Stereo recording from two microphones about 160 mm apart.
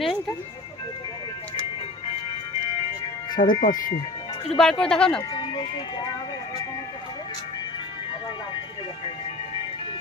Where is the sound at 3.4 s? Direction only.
55° left (ahead or behind).